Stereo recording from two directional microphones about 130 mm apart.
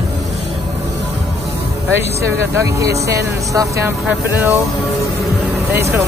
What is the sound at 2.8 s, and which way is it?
Speech, 25° right (ahead or behind).